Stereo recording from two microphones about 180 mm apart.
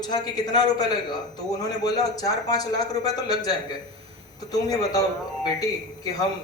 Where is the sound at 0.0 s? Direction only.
25° left (ahead or behind).